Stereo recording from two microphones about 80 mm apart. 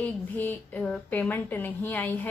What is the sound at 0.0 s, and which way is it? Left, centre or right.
A woman's voice, left.